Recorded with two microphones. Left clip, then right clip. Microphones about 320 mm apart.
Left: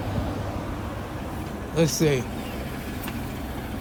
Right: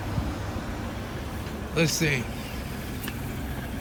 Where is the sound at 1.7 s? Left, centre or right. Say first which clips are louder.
Left 3 dB; centre.